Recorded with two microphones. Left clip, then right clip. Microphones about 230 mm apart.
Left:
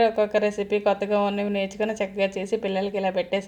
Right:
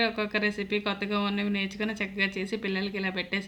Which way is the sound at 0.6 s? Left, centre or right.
Right.